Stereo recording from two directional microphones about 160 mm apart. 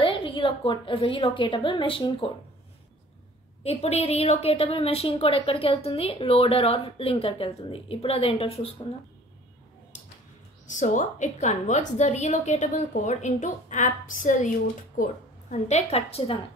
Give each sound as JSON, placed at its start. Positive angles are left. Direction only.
{"t": 0.0, "sound": "a woman's voice", "side_deg": 35}
{"t": 3.6, "sound": "a woman's voice", "side_deg": 40}
{"t": 10.7, "sound": "a woman's voice", "side_deg": 50}
{"t": 15.5, "sound": "a woman's voice", "side_deg": 40}